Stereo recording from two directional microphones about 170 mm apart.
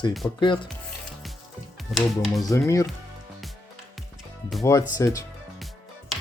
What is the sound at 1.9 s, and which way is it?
Speech, centre (ahead or behind).